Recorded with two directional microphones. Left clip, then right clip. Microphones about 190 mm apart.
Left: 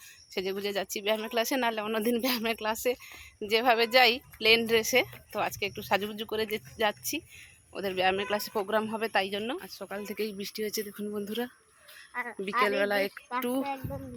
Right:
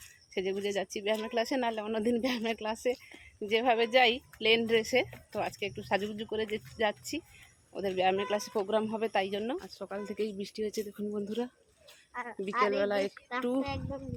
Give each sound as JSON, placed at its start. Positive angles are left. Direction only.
{"t": 0.3, "sound": "a woman's voice", "side_deg": 0}
{"t": 12.1, "sound": "speech", "side_deg": 40}
{"t": 12.6, "sound": "a man's voice", "side_deg": 5}